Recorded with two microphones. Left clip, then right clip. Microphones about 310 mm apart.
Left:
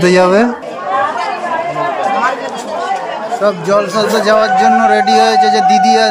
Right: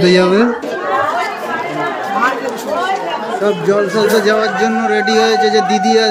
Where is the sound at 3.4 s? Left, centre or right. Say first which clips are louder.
Left 2 dB; centre.